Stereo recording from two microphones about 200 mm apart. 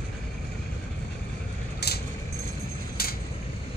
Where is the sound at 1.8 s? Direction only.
55° left (ahead or behind).